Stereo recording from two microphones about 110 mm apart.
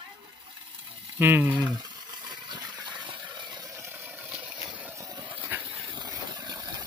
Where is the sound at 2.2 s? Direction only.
40° right (ahead or behind).